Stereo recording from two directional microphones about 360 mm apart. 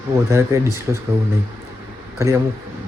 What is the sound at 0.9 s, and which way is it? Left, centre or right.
Speech, centre.